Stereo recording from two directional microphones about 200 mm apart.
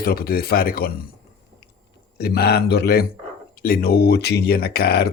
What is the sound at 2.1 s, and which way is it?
Speech, 50° left (ahead or behind).